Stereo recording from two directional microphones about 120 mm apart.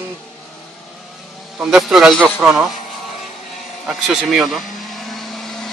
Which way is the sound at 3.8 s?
Centre (ahead or behind).